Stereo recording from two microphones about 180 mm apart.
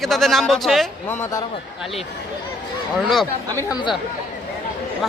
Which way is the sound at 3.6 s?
20° left (ahead or behind).